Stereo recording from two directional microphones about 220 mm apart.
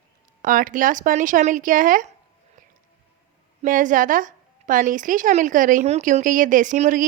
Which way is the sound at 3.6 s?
35° right (ahead or behind).